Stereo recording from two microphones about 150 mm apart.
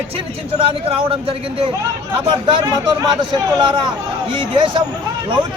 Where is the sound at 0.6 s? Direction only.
35° right (ahead or behind).